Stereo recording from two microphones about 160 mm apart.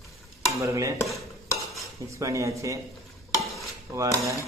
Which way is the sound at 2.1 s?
20° right (ahead or behind).